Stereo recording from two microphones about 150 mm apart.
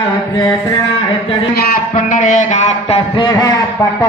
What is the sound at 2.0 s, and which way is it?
Speech, 55° left (ahead or behind).